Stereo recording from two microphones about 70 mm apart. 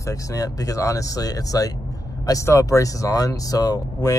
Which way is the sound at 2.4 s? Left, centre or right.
Left.